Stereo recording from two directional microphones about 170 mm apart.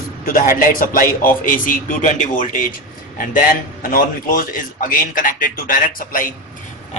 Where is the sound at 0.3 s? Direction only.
55° left (ahead or behind).